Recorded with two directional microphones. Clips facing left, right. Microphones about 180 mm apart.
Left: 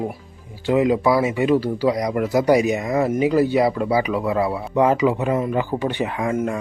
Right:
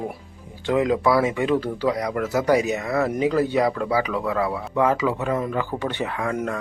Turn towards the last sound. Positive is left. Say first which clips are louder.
# left 3 dB
turn(degrees=20)  # may be behind; listen again after turning